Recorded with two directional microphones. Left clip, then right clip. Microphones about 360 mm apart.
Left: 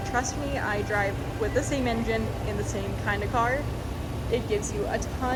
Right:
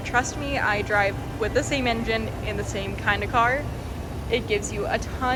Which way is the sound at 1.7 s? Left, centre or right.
Left.